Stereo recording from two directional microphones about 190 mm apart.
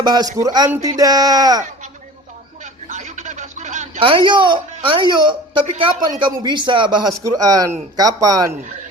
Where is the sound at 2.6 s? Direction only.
40° right (ahead or behind).